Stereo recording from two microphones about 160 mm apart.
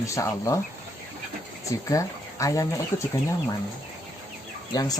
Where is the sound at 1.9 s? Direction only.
20° left (ahead or behind).